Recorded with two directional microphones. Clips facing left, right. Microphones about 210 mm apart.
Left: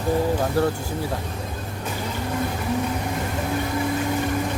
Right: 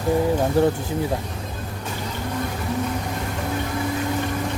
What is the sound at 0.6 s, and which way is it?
Speech, 15° right (ahead or behind).